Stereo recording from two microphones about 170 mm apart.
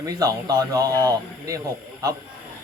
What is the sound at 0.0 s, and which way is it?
Speech, 20° right (ahead or behind).